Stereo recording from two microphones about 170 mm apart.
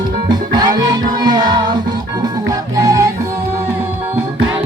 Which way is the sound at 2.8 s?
20° right (ahead or behind).